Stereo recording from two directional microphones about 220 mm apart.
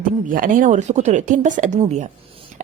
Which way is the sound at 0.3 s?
40° right (ahead or behind).